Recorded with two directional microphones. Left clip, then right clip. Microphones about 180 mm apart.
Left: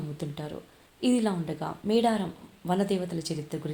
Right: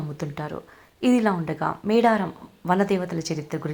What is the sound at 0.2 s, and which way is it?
A woman's voice, 15° right (ahead or behind).